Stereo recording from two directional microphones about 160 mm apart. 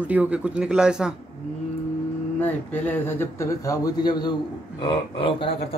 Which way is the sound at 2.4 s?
10° left (ahead or behind).